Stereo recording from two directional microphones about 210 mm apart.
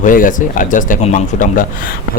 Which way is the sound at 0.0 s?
40° left (ahead or behind).